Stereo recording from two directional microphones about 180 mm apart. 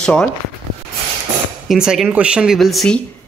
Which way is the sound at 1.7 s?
Centre (ahead or behind).